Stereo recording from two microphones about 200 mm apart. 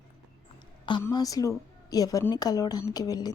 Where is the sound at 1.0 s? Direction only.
20° left (ahead or behind).